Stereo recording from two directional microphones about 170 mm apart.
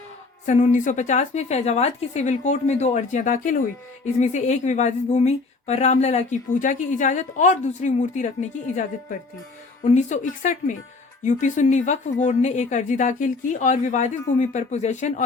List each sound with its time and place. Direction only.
0.4 s speech: 45° left (ahead or behind)